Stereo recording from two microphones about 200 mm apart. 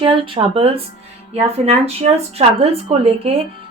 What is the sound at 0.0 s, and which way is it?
A woman's voice, 25° right (ahead or behind).